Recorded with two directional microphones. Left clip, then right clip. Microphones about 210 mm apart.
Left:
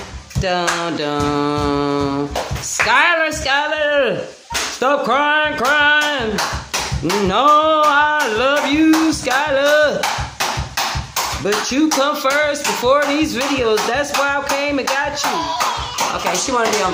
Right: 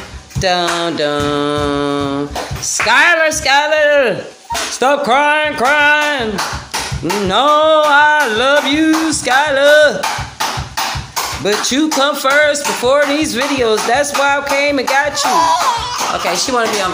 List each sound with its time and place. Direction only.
0.4 s speech: 5° right (ahead or behind)
7.2 s speech: centre (ahead or behind)
11.4 s speech: 5° right (ahead or behind)
15.3 s music: 50° right (ahead or behind)